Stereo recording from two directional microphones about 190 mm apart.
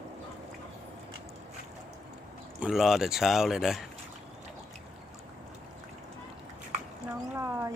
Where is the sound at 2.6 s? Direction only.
Centre (ahead or behind).